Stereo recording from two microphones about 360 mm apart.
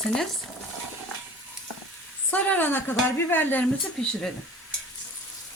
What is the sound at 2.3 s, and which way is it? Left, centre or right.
Speech, centre.